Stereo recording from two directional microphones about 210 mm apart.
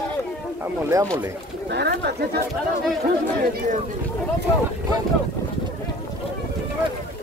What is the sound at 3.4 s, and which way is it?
Speech, 45° right (ahead or behind).